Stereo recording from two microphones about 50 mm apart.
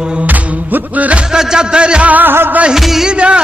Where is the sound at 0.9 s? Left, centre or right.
Right.